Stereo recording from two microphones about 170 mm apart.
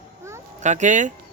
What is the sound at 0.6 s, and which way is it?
Speech, 45° right (ahead or behind).